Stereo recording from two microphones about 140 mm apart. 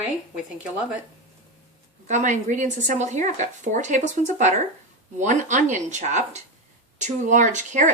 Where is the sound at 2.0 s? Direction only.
60° right (ahead or behind).